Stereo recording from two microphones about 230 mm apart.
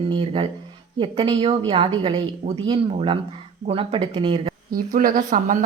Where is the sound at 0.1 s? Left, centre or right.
Right.